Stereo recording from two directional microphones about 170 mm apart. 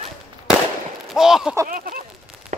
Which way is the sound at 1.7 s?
55° right (ahead or behind).